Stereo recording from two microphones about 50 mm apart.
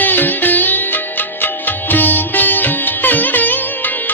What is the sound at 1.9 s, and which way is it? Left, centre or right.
Music, left.